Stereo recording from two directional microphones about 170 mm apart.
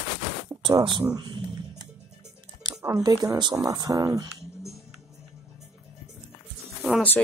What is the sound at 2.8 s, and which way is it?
Speech, 20° right (ahead or behind).